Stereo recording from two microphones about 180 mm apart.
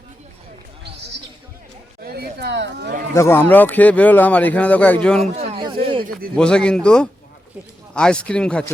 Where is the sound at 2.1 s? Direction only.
70° right (ahead or behind).